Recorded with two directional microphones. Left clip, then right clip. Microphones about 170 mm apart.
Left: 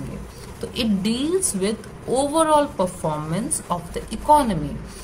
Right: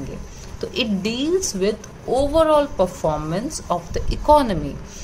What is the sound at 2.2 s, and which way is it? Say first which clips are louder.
A woman's voice: right 2 dB; 5° right (ahead or behind).